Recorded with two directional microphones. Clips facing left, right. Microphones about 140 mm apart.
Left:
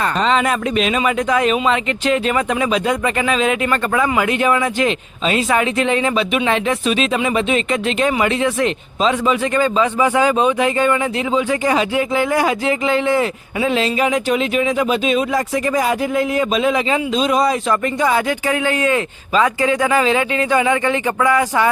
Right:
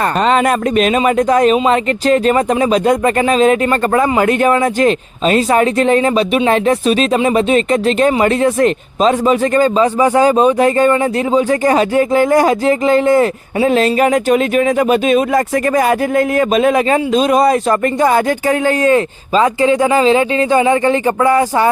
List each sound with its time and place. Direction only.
0.0 s speech: 50° right (ahead or behind)